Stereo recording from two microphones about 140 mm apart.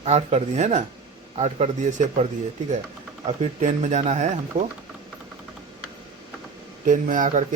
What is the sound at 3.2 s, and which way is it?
Speech, 55° right (ahead or behind).